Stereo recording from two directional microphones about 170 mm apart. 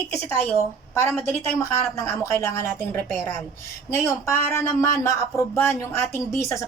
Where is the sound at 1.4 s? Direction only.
20° left (ahead or behind).